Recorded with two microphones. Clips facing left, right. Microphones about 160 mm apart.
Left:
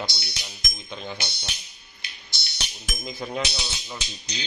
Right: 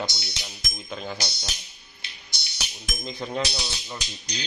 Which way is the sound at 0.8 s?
5° right (ahead or behind).